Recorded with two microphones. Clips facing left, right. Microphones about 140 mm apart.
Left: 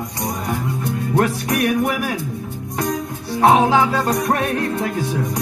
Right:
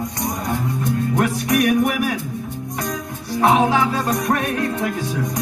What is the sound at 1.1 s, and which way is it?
Music, 30° left (ahead or behind).